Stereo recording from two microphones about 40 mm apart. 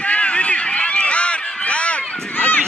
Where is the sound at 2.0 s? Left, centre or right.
Centre.